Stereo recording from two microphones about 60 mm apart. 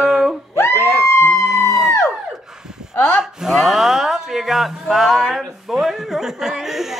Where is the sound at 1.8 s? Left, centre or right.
Left.